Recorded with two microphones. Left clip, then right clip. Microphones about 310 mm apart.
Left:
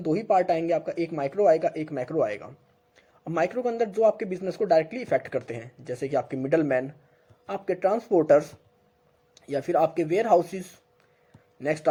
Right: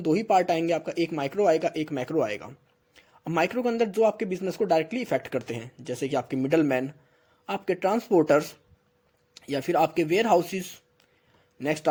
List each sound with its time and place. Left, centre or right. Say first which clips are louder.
0.0 s speech: even; right
4.4 s speech: left 2 dB; right